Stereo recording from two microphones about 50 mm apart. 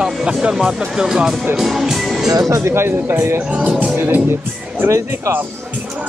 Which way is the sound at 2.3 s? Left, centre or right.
Right.